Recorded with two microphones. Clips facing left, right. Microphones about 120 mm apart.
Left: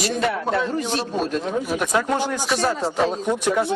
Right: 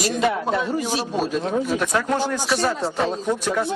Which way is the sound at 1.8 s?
10° left (ahead or behind).